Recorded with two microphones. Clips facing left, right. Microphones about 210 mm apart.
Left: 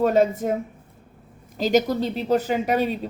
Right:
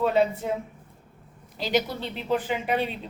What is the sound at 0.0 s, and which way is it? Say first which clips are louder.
Speech: left 4 dB; 45° left (ahead or behind).